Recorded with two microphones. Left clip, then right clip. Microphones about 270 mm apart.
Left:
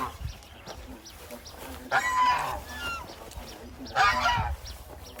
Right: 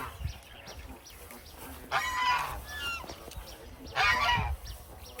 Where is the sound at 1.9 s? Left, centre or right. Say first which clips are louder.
Left 5 dB; left.